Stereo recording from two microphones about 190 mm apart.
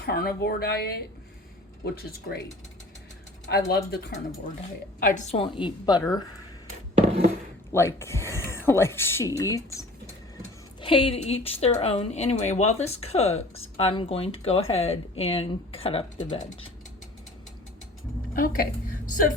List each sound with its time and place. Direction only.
0.0 s speech: 55° left (ahead or behind)
3.7 s speech: 60° left (ahead or behind)
4.9 s a woman's voice: 45° left (ahead or behind); by 6.0 s 25° left (ahead or behind)
7.0 s a sound: 35° right (ahead or behind)
7.7 s speech: 15° left (ahead or behind)
10.8 s speech: 30° left (ahead or behind)
18.3 s a woman's voice: 45° left (ahead or behind)